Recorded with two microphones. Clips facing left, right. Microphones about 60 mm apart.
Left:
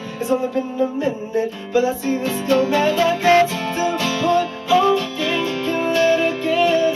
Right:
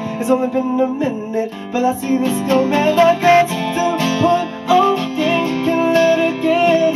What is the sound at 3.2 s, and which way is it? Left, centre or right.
Music, right.